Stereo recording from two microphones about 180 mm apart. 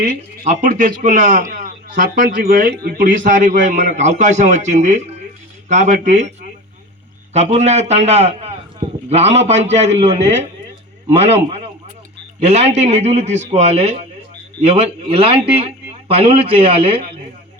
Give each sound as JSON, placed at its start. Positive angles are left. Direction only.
{"t": 0.4, "sound": "a man's voice", "side_deg": -45}
{"t": 7.3, "sound": "a man's voice", "side_deg": -40}